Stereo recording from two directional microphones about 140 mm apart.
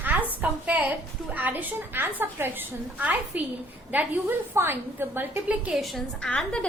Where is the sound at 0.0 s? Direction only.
15° right (ahead or behind).